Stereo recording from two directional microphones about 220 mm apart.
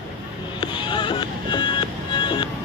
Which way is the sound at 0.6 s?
20° left (ahead or behind).